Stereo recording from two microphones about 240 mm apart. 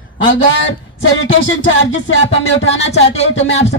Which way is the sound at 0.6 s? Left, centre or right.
Left.